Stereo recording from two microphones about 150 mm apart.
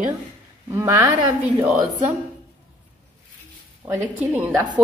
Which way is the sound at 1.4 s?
10° right (ahead or behind).